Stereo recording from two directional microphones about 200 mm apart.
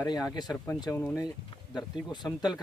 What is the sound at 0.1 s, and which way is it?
Speech, 20° left (ahead or behind).